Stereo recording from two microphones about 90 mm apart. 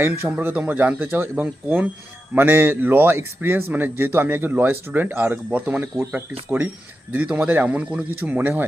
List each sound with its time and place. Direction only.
0.0 s speech: 25° right (ahead or behind)
7.1 s speech: 15° right (ahead or behind)